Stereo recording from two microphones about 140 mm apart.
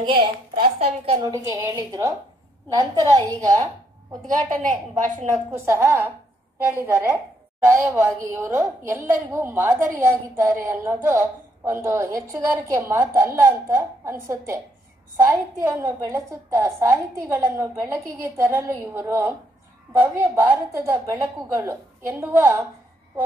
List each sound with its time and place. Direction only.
0.0 s a woman's voice: 35° right (ahead or behind)
1.2 s a woman's voice: 25° right (ahead or behind)
4.3 s a woman's voice: 65° right (ahead or behind)
5.5 s a woman's voice: 15° right (ahead or behind)